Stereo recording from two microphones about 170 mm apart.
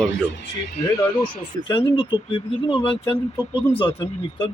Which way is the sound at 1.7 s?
30° left (ahead or behind).